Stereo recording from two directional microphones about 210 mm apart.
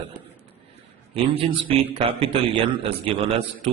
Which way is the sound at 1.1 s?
25° right (ahead or behind).